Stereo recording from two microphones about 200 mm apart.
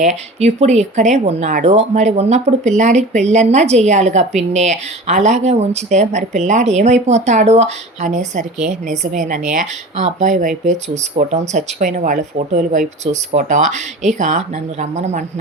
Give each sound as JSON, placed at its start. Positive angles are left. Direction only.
{"t": 0.0, "sound": "speech", "side_deg": -35}